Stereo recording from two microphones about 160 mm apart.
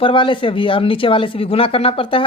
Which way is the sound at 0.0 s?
30° left (ahead or behind).